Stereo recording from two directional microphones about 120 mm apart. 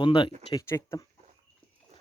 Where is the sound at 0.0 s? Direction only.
45° left (ahead or behind).